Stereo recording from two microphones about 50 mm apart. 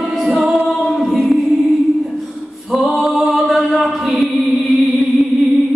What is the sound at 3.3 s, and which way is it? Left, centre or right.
Chant, centre.